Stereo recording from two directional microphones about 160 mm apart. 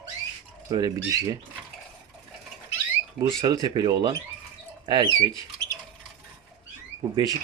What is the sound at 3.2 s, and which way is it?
Speech, 20° right (ahead or behind).